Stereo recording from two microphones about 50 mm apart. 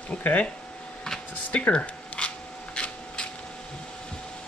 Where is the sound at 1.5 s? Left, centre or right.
Left.